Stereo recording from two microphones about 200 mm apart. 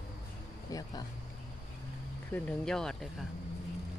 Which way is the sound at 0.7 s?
15° left (ahead or behind).